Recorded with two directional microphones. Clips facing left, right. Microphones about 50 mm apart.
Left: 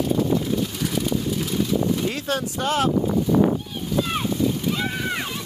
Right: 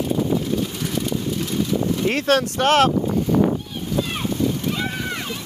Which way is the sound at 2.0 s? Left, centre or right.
Right.